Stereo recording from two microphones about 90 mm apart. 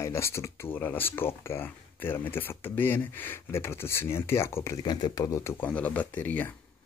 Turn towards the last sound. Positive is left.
turn(degrees=20)  # may be behind; listen again after turning